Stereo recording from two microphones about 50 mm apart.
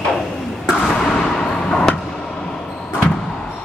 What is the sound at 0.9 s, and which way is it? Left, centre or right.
Vehicle, centre.